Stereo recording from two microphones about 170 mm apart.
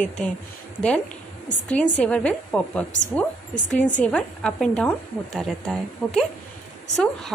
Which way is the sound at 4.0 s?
5° left (ahead or behind).